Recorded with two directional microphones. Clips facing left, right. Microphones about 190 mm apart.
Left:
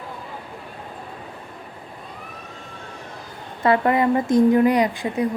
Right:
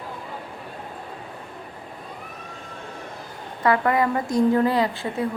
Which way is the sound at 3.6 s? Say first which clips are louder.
Left 2 dB; 25° left (ahead or behind).